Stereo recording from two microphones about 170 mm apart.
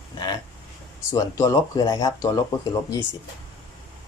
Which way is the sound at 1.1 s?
20° left (ahead or behind).